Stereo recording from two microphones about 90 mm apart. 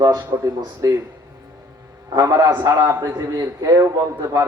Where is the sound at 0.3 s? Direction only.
40° right (ahead or behind).